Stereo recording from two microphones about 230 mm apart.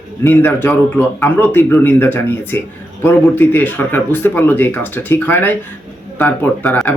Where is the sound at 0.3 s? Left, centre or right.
Centre.